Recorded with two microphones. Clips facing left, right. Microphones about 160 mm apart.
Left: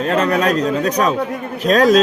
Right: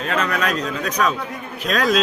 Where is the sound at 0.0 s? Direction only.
40° left (ahead or behind).